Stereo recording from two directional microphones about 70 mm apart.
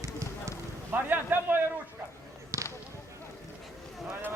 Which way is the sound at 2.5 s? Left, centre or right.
Right.